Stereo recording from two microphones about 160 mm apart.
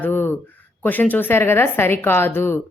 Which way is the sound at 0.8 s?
10° left (ahead or behind).